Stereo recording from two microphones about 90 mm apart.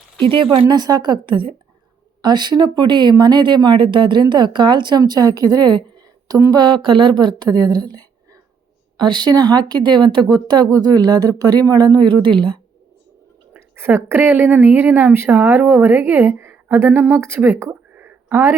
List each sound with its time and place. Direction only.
0.7 s speech: 50° right (ahead or behind); by 1.5 s 70° right (ahead or behind)
2.2 s speech: 55° right (ahead or behind)
13.5 s a woman's voice: 25° right (ahead or behind)